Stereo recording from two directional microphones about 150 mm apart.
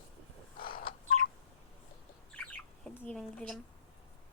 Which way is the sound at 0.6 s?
70° left (ahead or behind).